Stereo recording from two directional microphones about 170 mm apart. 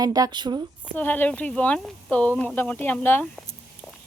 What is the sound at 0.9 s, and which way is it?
Speech, 10° left (ahead or behind).